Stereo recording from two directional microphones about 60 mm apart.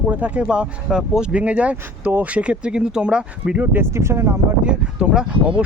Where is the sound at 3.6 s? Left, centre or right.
Right.